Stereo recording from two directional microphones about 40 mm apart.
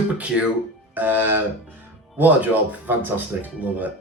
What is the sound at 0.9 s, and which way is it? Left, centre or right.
Speech, right.